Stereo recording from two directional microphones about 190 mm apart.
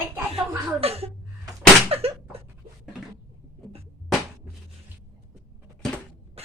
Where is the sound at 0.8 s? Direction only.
30° right (ahead or behind).